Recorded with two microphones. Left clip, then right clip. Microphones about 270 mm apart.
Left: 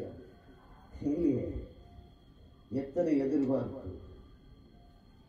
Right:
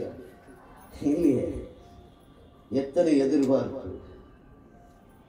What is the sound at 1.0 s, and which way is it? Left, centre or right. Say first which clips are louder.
Speech: right 7 dB; left.